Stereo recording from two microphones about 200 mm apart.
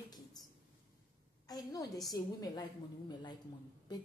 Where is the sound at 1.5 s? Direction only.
20° left (ahead or behind).